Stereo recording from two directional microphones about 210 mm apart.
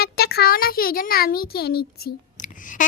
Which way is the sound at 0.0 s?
50° left (ahead or behind).